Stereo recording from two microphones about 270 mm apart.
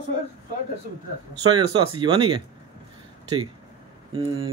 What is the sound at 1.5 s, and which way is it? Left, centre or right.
Speech, centre.